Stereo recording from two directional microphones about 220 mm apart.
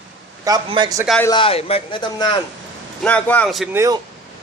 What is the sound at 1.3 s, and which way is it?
A man's voice, 25° left (ahead or behind).